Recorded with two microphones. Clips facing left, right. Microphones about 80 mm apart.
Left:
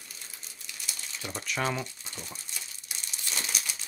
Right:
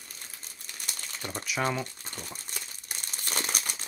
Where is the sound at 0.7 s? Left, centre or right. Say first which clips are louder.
Right 1 dB; right.